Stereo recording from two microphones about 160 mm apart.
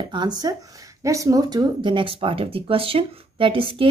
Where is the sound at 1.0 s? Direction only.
20° right (ahead or behind).